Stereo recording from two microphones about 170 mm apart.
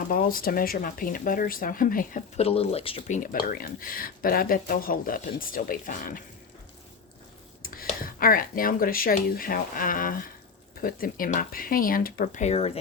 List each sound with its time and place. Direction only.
0.1 s speech: 55° left (ahead or behind); by 3.2 s 35° left (ahead or behind)
3.3 s speech: 60° left (ahead or behind)
7.6 s speech: 60° left (ahead or behind); by 12.8 s 35° left (ahead or behind)